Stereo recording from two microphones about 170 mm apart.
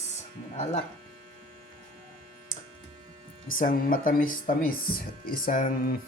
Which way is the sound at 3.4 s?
55° left (ahead or behind).